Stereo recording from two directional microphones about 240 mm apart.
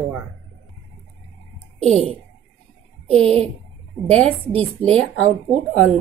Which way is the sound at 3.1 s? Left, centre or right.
Right.